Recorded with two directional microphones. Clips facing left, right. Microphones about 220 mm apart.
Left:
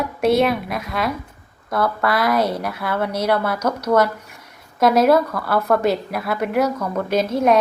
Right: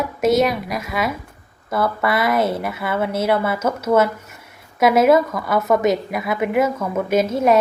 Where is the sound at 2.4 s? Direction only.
25° right (ahead or behind).